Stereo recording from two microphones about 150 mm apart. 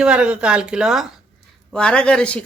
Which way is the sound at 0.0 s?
5° right (ahead or behind).